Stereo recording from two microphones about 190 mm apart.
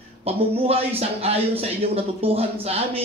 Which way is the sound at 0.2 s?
30° right (ahead or behind).